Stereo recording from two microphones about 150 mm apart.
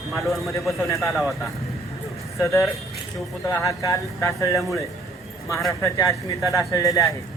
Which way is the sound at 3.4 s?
20° left (ahead or behind).